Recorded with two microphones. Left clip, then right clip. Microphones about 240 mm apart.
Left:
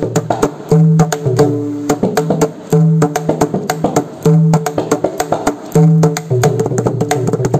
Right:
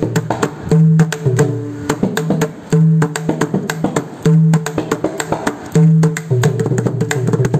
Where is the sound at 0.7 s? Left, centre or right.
Centre.